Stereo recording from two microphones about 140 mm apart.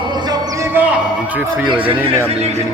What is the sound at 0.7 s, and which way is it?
Speech, 10° right (ahead or behind).